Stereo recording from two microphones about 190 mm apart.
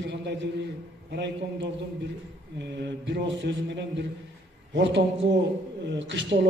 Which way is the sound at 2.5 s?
65° right (ahead or behind).